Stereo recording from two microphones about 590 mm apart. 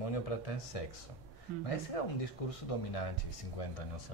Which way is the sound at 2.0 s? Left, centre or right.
Left.